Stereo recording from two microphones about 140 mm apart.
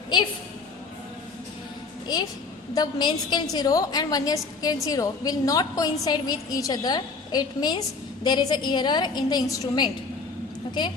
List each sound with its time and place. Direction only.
2.1 s a woman's voice: 30° left (ahead or behind)